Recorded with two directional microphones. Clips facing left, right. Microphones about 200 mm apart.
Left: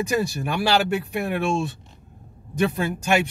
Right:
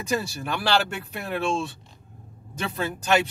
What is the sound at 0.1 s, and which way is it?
A man's voice, 15° left (ahead or behind).